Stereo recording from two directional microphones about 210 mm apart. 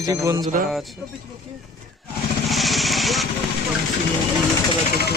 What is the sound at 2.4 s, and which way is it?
Vehicle, centre (ahead or behind).